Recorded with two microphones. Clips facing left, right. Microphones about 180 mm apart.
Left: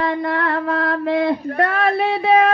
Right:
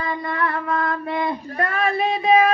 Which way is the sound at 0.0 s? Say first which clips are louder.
Left 4 dB; 70° left (ahead or behind).